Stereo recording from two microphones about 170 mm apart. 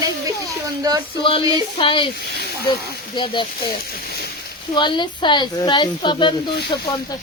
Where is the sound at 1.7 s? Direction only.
30° left (ahead or behind).